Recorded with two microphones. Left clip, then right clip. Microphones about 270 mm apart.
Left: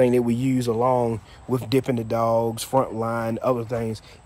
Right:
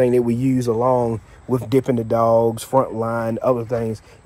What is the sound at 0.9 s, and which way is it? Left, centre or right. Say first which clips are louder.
Speech: right 3 dB; centre.